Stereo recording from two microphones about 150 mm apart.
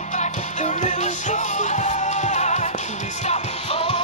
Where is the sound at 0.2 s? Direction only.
55° left (ahead or behind).